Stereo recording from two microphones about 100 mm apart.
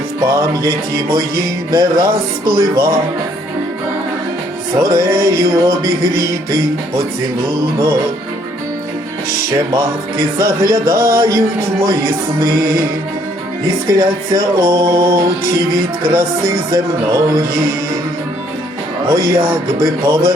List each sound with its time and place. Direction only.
0.3 s speech: 35° right (ahead or behind)
4.8 s speech: 35° right (ahead or behind)
9.7 s speech: 30° right (ahead or behind)
13.8 s speech: 35° right (ahead or behind)
19.1 s speech: 35° right (ahead or behind)